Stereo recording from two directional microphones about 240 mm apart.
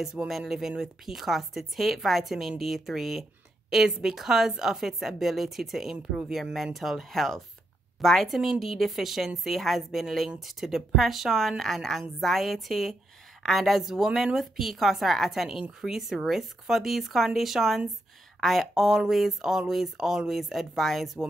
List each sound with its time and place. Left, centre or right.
0.0 s a woman's voice: centre